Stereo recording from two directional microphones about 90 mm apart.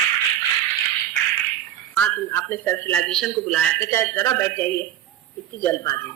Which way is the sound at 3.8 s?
25° left (ahead or behind).